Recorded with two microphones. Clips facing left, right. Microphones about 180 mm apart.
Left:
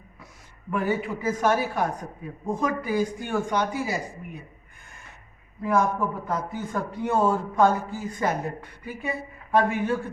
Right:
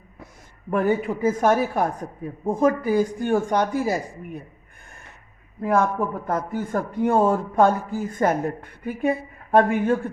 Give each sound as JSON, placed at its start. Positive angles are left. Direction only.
{"t": 0.7, "sound": "a man's voice", "side_deg": -50}
{"t": 5.6, "sound": "a man's voice", "side_deg": -55}